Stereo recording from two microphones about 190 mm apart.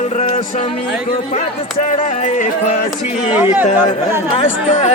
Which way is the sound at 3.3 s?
10° right (ahead or behind).